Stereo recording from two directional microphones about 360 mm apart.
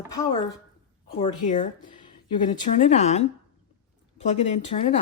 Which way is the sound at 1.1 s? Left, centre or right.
Centre.